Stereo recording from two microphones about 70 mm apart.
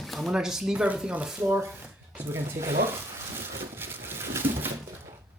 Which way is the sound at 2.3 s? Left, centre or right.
Right.